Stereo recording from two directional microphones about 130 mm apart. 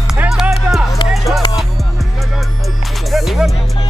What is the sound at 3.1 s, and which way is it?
Speech, centre (ahead or behind).